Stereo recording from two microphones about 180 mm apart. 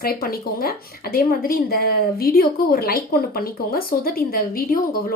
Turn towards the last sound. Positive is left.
turn(degrees=55)  # may be behind; listen again after turning